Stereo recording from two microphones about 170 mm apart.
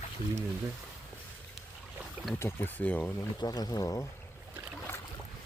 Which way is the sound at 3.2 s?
20° left (ahead or behind).